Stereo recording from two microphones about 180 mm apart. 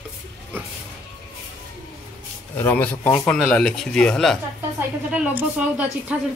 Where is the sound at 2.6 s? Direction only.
10° left (ahead or behind).